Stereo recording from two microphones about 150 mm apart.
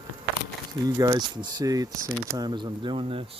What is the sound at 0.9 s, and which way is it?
Speech, 25° right (ahead or behind).